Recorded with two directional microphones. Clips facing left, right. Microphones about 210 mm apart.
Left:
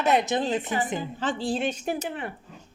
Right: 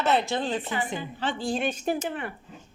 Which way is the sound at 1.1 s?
40° left (ahead or behind).